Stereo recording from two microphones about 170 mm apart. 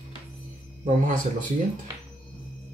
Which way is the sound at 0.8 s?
50° right (ahead or behind).